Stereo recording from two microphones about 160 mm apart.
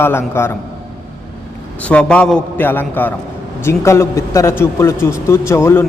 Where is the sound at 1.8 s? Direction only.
5° left (ahead or behind).